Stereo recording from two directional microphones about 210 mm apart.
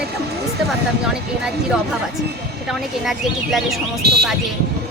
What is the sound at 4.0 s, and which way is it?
Speech, 50° right (ahead or behind).